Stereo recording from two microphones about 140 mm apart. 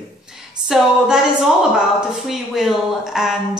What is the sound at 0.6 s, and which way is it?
Speech, 5° right (ahead or behind).